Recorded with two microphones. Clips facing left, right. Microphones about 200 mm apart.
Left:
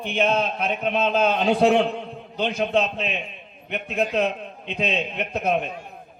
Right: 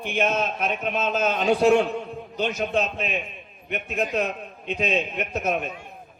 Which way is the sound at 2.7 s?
50° right (ahead or behind).